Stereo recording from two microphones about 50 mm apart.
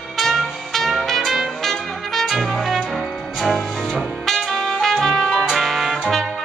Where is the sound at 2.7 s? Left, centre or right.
Centre.